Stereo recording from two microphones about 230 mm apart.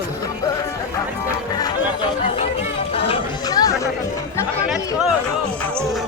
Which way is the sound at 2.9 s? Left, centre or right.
Left.